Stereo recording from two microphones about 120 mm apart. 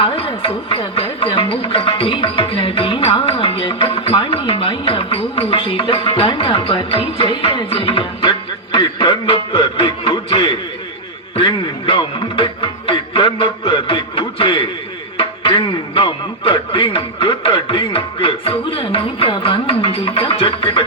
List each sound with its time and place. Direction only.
0.0 s speech: 50° left (ahead or behind)
7.2 s music: 45° left (ahead or behind)